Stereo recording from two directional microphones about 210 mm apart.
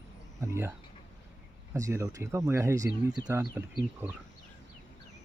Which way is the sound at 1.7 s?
15° right (ahead or behind).